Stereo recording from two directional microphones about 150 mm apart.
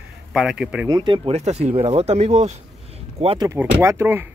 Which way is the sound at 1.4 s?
45° right (ahead or behind).